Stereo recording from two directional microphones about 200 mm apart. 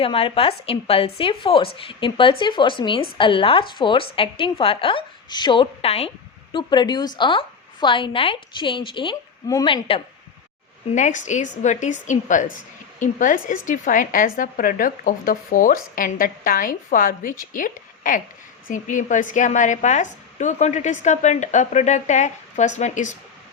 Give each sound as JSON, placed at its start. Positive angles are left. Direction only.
{"t": 0.0, "sound": "a woman's voice", "side_deg": 25}
{"t": 10.9, "sound": "a woman's voice", "side_deg": 40}